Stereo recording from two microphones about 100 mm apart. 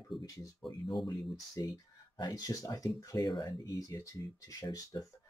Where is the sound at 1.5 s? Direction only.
40° left (ahead or behind).